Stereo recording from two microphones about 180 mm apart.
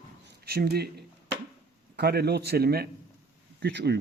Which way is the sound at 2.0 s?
65° right (ahead or behind).